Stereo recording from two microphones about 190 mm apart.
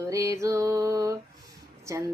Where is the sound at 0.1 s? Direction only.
15° right (ahead or behind).